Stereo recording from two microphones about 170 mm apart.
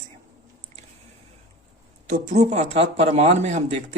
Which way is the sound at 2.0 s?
45° right (ahead or behind).